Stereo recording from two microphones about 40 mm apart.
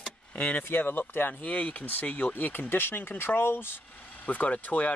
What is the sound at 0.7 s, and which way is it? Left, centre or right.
Speech, left.